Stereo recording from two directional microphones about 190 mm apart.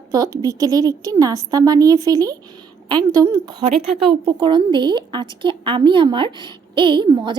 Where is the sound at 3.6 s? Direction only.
30° right (ahead or behind).